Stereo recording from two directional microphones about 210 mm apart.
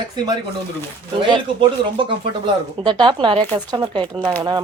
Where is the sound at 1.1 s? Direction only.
25° right (ahead or behind).